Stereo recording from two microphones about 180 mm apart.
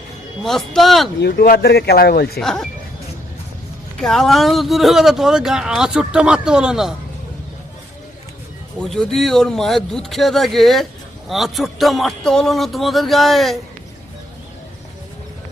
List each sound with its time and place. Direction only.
0.4 s speech: centre (ahead or behind)
1.2 s a man's voice: 60° left (ahead or behind)
2.4 s speech: centre (ahead or behind)
4.0 s speech: centre (ahead or behind)
8.8 s speech: 5° left (ahead or behind)